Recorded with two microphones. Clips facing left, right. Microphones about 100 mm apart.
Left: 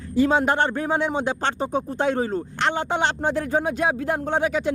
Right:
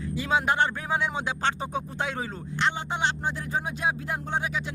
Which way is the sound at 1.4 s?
35° left (ahead or behind).